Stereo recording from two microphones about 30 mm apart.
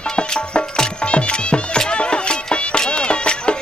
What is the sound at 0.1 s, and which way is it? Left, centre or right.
Music, left.